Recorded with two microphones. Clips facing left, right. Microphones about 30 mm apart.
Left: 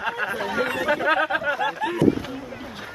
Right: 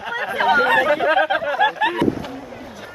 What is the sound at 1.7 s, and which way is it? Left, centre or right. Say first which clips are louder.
Speech: right 5 dB; right.